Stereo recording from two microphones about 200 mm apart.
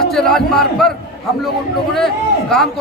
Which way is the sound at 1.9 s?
Centre (ahead or behind).